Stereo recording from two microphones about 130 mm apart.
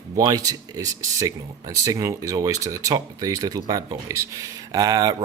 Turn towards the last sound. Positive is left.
turn(degrees=-30)  # may be behind; listen again after turning